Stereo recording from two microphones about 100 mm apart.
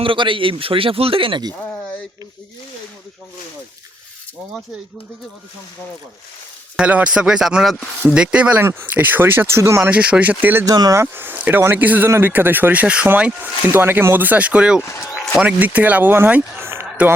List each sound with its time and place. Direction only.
0.0 s speech: 60° right (ahead or behind)
6.7 s speech: 10° right (ahead or behind); by 9.9 s 30° right (ahead or behind)
9.9 s speech: 15° right (ahead or behind)
10.7 s speech: 35° right (ahead or behind)